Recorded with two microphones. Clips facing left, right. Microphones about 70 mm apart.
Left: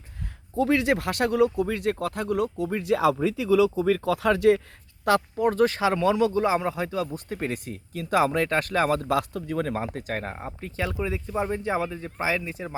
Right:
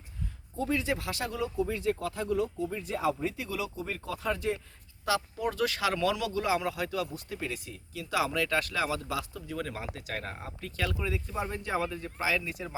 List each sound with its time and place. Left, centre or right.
0.5 s speech: left
5.0 s speech: left